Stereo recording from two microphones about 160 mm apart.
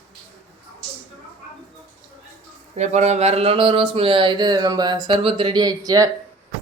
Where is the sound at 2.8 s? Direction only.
45° right (ahead or behind); by 6.1 s 25° right (ahead or behind).